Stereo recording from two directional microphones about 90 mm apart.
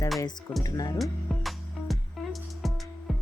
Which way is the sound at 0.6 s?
45° left (ahead or behind).